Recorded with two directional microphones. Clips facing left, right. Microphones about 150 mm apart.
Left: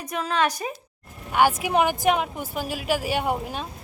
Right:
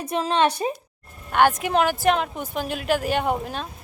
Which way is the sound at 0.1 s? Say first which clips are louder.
Right 3 dB; 25° right (ahead or behind).